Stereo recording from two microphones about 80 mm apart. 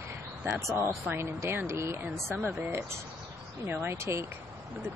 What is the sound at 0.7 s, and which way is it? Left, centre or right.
Speech, right.